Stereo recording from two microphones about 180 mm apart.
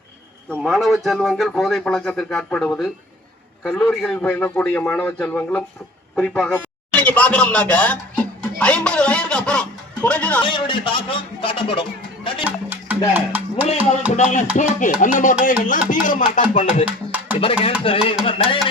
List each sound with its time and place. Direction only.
0.6 s a man's voice: centre (ahead or behind)
10.4 s a man's voice: 30° left (ahead or behind)
12.5 s music: 10° right (ahead or behind)
14.2 s a sound: 40° left (ahead or behind)
14.5 s music: 45° left (ahead or behind)
16.8 s music: 10° right (ahead or behind)
17.4 s a sound: 30° left (ahead or behind)